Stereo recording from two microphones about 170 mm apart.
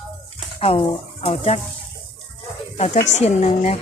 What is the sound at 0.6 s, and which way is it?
Speech, 35° left (ahead or behind).